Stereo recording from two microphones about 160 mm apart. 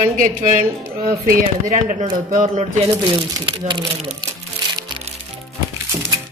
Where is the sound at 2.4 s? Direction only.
40° right (ahead or behind).